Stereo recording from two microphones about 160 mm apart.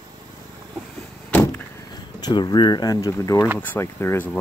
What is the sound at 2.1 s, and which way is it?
Speech, 25° left (ahead or behind).